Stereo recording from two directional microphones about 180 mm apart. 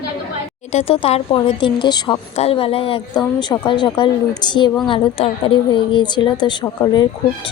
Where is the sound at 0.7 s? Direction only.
35° left (ahead or behind).